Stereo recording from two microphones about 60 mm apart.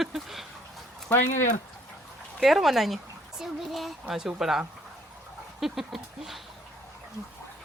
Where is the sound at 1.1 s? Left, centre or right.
Left.